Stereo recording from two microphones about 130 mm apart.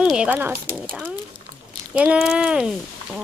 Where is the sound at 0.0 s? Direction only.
5° right (ahead or behind).